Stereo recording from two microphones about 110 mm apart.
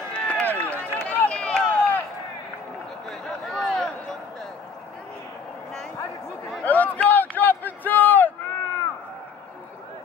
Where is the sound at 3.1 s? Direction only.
5° left (ahead or behind).